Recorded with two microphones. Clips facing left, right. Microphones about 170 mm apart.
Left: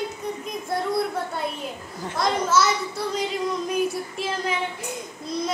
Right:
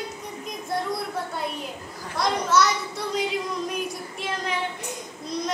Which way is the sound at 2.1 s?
Centre (ahead or behind).